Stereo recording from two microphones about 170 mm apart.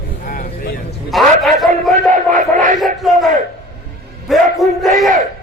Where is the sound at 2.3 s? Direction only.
50° right (ahead or behind).